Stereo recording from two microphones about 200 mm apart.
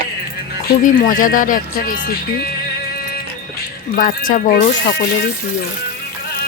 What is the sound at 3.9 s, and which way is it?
Speech, 45° left (ahead or behind).